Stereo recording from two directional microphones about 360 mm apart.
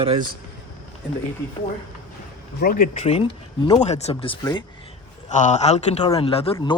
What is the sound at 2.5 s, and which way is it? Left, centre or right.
Speech, left.